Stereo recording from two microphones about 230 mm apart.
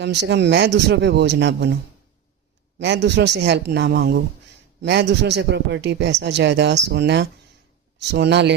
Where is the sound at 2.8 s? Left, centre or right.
Right.